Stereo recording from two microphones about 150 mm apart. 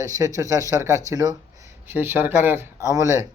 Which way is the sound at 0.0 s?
20° right (ahead or behind).